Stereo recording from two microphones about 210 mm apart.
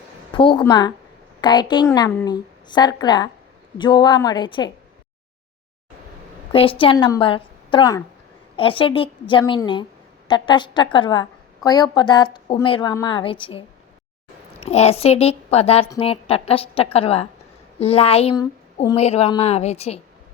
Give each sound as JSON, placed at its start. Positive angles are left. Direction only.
{"t": 0.3, "sound": "a woman's voice", "side_deg": 25}
{"t": 6.5, "sound": "a woman's voice", "side_deg": 25}